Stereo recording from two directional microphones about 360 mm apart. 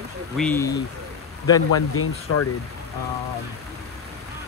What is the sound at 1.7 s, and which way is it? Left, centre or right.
Speech, left.